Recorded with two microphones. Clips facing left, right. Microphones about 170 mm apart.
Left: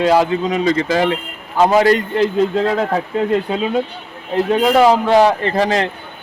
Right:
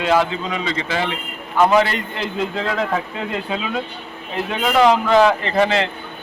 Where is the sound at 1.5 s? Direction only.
30° left (ahead or behind).